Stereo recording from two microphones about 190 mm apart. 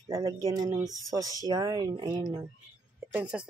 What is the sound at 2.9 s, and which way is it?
Speech, 5° right (ahead or behind).